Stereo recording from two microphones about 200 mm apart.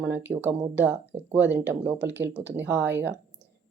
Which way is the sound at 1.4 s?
60° right (ahead or behind).